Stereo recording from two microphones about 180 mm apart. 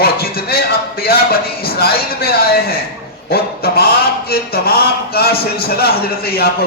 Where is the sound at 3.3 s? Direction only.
60° left (ahead or behind).